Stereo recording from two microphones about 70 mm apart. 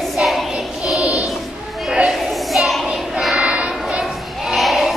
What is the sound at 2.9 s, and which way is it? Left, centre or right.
Child singing, centre.